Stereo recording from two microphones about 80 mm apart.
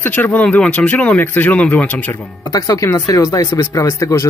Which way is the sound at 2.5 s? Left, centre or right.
Left.